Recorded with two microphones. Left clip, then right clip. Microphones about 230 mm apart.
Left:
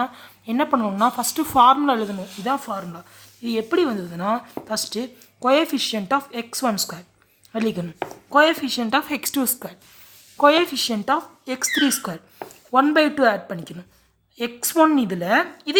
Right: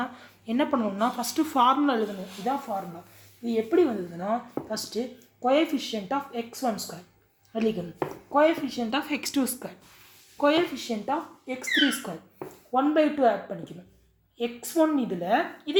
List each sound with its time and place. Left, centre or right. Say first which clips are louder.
0.0 s a woman's voice: left 8 dB; left
11.0 s speech: left 7 dB; left